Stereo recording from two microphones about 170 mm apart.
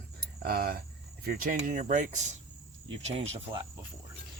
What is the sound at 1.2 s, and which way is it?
Speech, 55° right (ahead or behind).